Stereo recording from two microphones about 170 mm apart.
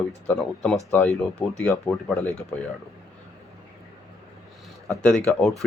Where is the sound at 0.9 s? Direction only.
10° left (ahead or behind).